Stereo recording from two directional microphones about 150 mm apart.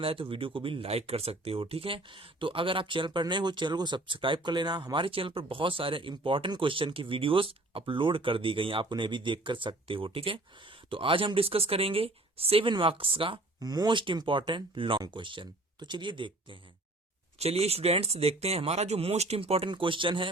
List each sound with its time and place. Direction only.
0.0 s speech: 40° right (ahead or behind)
17.3 s speech: 45° right (ahead or behind)